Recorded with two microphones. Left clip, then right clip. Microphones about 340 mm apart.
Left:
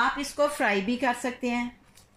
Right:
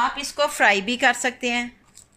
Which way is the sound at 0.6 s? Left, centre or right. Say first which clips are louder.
Right 8 dB; right.